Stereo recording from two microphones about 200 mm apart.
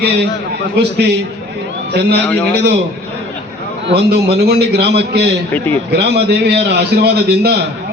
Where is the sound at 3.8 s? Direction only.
55° right (ahead or behind).